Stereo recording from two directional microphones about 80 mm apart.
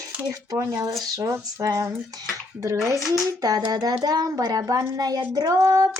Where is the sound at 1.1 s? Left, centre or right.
Right.